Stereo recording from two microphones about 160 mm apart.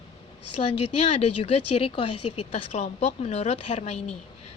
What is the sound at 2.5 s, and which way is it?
A woman's voice, 45° left (ahead or behind).